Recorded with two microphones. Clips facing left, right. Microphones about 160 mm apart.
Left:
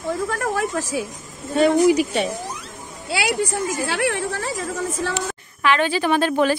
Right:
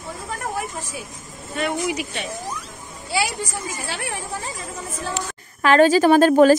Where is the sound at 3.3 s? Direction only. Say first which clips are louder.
Left 7 dB; 85° left.